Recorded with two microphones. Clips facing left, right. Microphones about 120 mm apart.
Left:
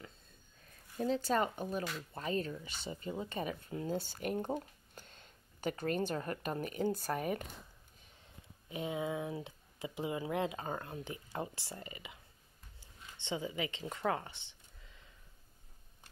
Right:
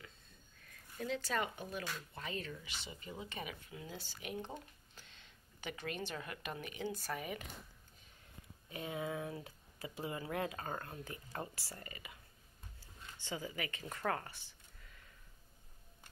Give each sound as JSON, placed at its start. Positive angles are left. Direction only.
{"t": 0.9, "sound": "speech", "side_deg": 35}
{"t": 8.6, "sound": "speech", "side_deg": 20}
{"t": 12.8, "sound": "a sound", "side_deg": 20}